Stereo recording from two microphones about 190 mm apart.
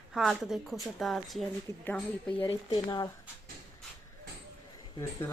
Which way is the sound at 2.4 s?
25° left (ahead or behind).